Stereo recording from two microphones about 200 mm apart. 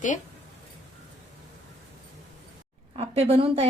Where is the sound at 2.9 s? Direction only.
30° right (ahead or behind).